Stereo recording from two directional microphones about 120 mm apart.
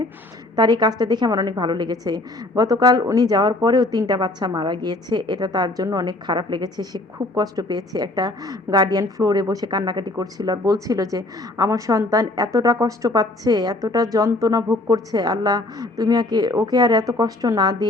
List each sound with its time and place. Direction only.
0.5 s a woman's voice: 35° right (ahead or behind)